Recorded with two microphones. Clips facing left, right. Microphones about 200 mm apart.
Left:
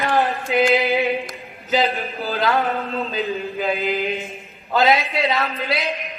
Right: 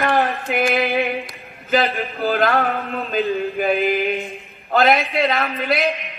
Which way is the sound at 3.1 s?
55° right (ahead or behind).